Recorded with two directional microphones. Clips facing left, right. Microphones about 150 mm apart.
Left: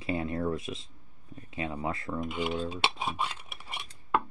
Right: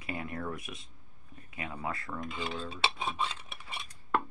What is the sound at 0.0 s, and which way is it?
Speech, 25° left (ahead or behind).